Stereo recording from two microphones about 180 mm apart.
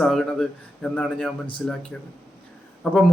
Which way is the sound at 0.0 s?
5° left (ahead or behind).